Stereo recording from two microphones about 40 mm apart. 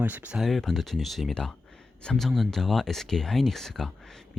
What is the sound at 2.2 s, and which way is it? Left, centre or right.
Speech, centre.